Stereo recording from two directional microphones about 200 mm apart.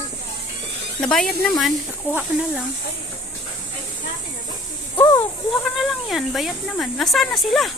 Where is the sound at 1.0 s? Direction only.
5° left (ahead or behind).